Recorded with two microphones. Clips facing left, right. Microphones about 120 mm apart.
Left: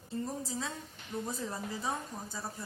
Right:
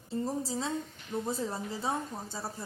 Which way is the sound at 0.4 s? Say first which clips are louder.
Right 5 dB; 30° right (ahead or behind).